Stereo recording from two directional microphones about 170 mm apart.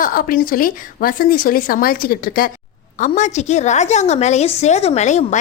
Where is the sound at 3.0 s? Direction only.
45° left (ahead or behind).